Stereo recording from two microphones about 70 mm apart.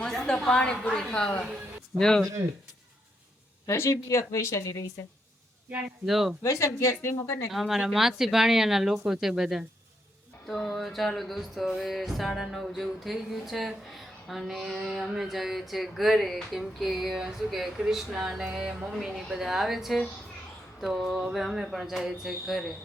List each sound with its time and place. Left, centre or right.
0.0 s a woman's voice: centre
3.7 s speech: left
6.1 s music: centre
6.4 s speech: left
7.5 s music: centre